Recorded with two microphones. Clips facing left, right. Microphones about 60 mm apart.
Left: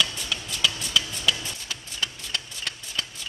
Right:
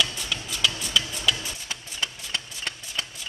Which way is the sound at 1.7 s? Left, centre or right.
Right.